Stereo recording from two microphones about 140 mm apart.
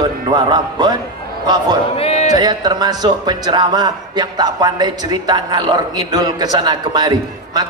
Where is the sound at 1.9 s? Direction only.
50° left (ahead or behind).